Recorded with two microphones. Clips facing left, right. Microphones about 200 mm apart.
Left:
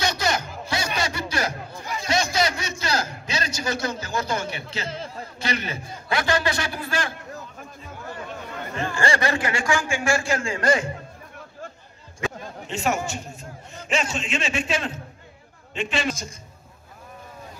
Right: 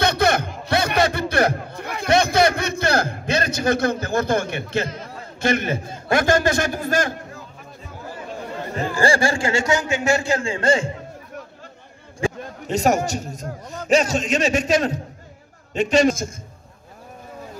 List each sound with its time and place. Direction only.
0.0 s music: 60° right (ahead or behind)
0.7 s a sound: 60° right (ahead or behind)
4.8 s a man's voice: 30° left (ahead or behind)
5.4 s a man's voice: 50° right (ahead or behind)
8.5 s chatter: 30° right (ahead or behind)
8.9 s a man's voice: 30° right (ahead or behind)
12.2 s a man's voice: 40° right (ahead or behind)